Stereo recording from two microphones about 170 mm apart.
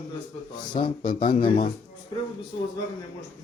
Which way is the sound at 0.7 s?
30° left (ahead or behind).